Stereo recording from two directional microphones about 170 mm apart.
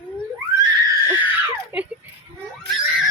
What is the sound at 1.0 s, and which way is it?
Screaming, 10° right (ahead or behind).